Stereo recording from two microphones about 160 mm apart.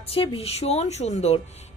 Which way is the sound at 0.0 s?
35° left (ahead or behind).